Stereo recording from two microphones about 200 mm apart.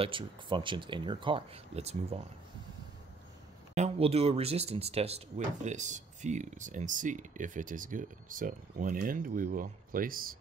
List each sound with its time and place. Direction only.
0.0 s speech: 25° right (ahead or behind)
3.7 s speech: 35° right (ahead or behind)